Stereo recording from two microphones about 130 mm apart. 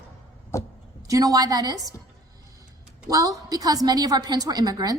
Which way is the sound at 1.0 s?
25° right (ahead or behind).